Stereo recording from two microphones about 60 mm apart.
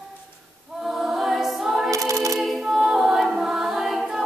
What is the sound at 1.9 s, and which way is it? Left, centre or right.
A capella, right.